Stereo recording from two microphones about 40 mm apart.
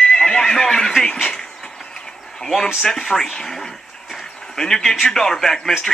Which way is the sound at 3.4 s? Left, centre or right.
Centre.